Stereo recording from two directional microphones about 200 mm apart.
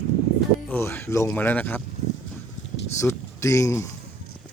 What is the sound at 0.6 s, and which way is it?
Speech, 10° left (ahead or behind).